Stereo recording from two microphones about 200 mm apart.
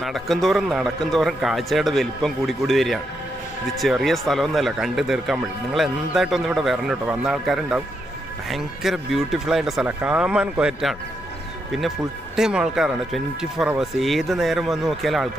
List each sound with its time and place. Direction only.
0.0 s speech: centre (ahead or behind)
12.4 s speech: 5° right (ahead or behind)